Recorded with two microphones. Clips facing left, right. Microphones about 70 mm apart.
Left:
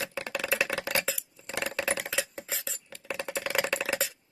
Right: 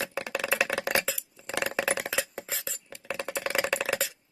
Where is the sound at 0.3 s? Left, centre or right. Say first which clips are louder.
Right 2 dB; centre.